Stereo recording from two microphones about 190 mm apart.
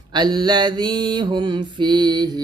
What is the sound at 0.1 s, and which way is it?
Mantra, 20° right (ahead or behind).